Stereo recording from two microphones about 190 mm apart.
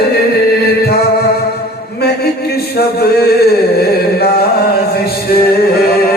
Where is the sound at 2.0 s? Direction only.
55° left (ahead or behind).